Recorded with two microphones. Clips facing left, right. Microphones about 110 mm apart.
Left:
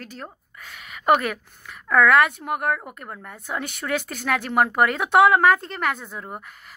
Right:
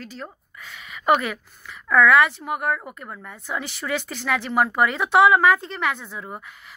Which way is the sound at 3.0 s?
40° left (ahead or behind).